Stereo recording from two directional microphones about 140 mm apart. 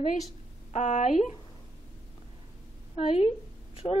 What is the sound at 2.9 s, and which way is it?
Speech, 45° left (ahead or behind).